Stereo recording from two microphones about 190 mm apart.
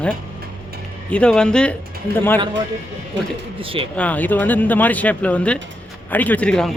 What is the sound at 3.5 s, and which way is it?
Speech, 30° right (ahead or behind).